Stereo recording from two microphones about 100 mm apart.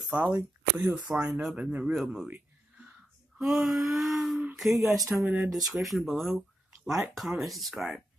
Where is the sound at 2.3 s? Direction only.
15° right (ahead or behind).